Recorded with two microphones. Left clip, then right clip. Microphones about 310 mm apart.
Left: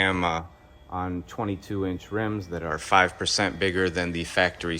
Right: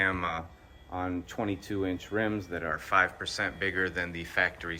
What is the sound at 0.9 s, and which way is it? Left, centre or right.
Speech, right.